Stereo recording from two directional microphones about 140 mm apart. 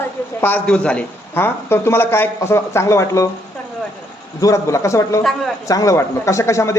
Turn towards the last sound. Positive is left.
turn(degrees=20)  # may be behind; listen again after turning